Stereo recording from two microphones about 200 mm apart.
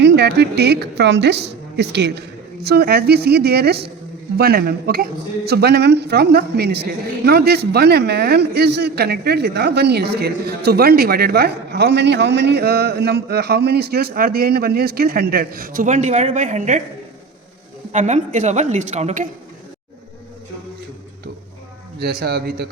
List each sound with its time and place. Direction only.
0.0 s a woman's voice: 55° right (ahead or behind); by 16.8 s 40° right (ahead or behind)
17.9 s a woman's voice: 35° right (ahead or behind)
21.9 s a man's voice: 50° right (ahead or behind)